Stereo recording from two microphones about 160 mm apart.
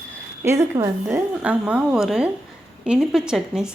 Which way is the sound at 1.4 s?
5° right (ahead or behind).